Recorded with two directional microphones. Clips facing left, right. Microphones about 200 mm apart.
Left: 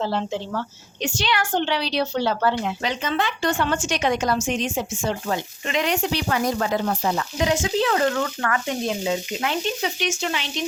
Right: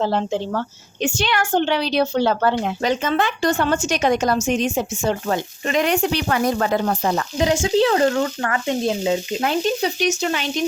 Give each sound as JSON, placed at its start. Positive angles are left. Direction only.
{"t": 0.0, "sound": "a woman's voice", "side_deg": -50}
{"t": 7.3, "sound": "speech", "side_deg": -30}
{"t": 9.4, "sound": "speech", "side_deg": -40}